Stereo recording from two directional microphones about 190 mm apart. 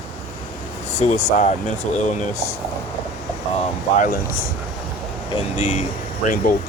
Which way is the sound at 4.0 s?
50° left (ahead or behind).